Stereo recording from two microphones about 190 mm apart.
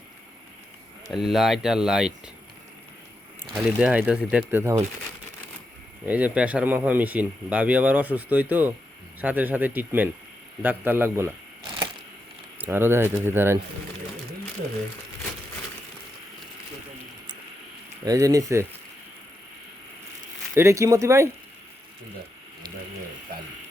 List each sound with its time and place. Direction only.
1.1 s speech: centre (ahead or behind)
3.4 s speech: 10° right (ahead or behind)
6.1 s speech: 10° right (ahead or behind)
12.5 s speech: 10° right (ahead or behind)
18.0 s speech: 20° right (ahead or behind)
20.6 s speech: 15° right (ahead or behind)